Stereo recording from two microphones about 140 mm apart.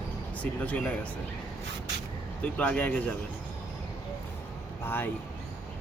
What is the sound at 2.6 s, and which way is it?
Speech, 10° left (ahead or behind).